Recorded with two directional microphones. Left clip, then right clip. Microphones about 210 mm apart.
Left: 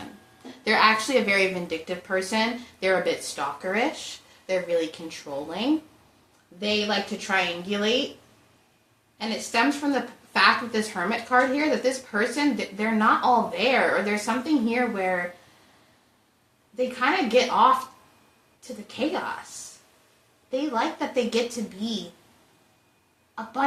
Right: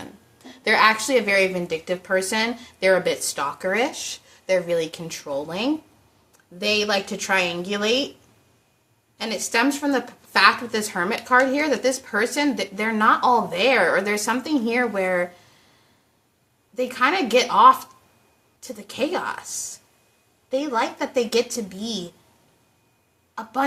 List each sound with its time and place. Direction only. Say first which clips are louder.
0.4 s speech: right 3 dB; 15° right (ahead or behind)
9.1 s speech: right 3 dB; 20° right (ahead or behind)
16.7 s speech: right 3 dB; 20° right (ahead or behind)
18.9 s speech: right 3 dB; 20° right (ahead or behind)
20.5 s speech: right 3 dB; 20° right (ahead or behind)
23.3 s speech: right 3 dB; 20° right (ahead or behind)